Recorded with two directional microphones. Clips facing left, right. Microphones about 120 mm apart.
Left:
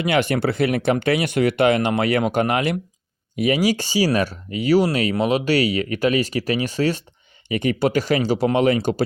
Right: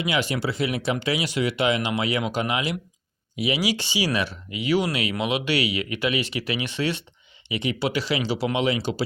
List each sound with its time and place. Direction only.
0.0 s speech: 55° left (ahead or behind)